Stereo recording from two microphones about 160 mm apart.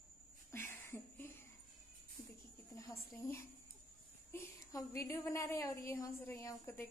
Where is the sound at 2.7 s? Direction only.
20° left (ahead or behind).